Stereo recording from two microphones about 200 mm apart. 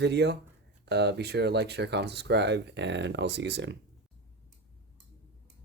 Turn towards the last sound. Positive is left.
turn(degrees=-60)  # may be behind; listen again after turning